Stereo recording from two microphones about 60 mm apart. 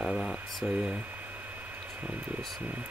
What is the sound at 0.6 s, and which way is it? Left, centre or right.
Speech, centre.